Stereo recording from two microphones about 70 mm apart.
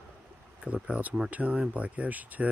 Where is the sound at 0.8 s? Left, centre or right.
Centre.